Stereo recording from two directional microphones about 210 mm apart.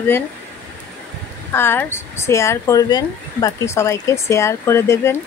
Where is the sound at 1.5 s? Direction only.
10° left (ahead or behind).